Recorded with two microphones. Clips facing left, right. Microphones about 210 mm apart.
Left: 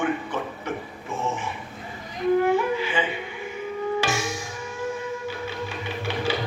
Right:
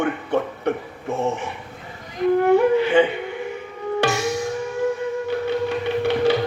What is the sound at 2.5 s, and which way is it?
Music, 60° right (ahead or behind).